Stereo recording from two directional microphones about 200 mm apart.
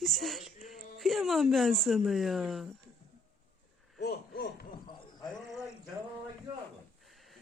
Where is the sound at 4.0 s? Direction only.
55° left (ahead or behind).